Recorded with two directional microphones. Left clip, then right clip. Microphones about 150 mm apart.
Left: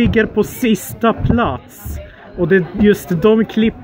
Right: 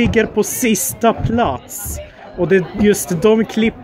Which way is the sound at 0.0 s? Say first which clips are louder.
Even; 5° right (ahead or behind).